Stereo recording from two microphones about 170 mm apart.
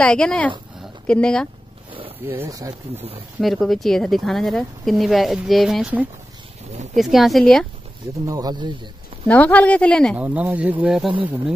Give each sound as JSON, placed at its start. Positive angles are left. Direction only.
{"t": 0.0, "sound": "speech", "side_deg": 5}
{"t": 2.2, "sound": "speech", "side_deg": -15}
{"t": 3.3, "sound": "speech", "side_deg": 0}
{"t": 8.3, "sound": "speech", "side_deg": -20}
{"t": 9.3, "sound": "speech", "side_deg": 10}
{"t": 10.1, "sound": "speech", "side_deg": -10}